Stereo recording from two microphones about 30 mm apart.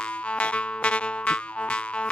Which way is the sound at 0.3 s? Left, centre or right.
Left.